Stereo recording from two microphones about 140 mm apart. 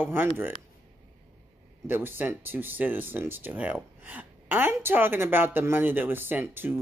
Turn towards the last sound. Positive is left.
turn(degrees=-15)  # may be behind; listen again after turning